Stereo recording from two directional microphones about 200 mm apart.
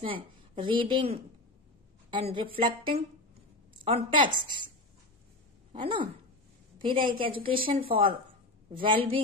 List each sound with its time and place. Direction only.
0.0 s a woman's voice: 25° right (ahead or behind)
5.7 s a woman's voice: 25° right (ahead or behind)